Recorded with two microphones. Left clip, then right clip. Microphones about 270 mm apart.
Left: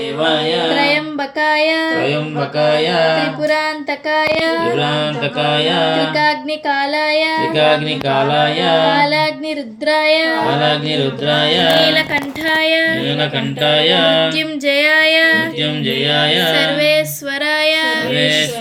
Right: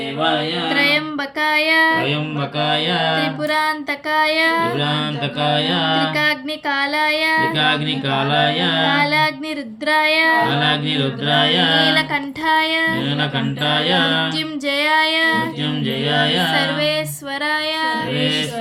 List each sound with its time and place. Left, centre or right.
0.7 s music: centre
2.6 s mantra: right
3.4 s music: centre
5.4 s mantra: right
6.1 s music: centre
7.5 s mantra: right
8.9 s music: centre
10.5 s music: centre
11.7 s music: centre
13.7 s music: centre
14.3 s music: centre
16.6 s music: centre
18.1 s music: right